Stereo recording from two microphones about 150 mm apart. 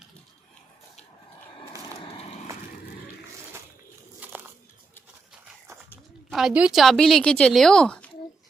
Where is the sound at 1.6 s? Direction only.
35° left (ahead or behind).